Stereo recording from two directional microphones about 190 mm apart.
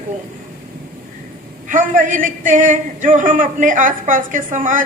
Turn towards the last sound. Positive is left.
turn(degrees=-45)  # may be behind; listen again after turning